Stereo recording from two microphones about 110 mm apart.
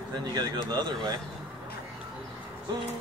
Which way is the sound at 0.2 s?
35° right (ahead or behind).